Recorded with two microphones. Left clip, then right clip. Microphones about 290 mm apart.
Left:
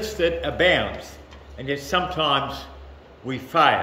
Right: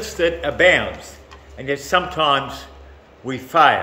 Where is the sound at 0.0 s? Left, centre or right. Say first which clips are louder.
Right 3 dB; centre.